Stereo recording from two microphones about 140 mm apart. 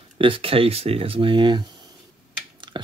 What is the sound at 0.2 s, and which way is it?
Speech, 40° right (ahead or behind).